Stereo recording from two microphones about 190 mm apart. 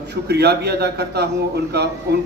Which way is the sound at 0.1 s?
60° right (ahead or behind).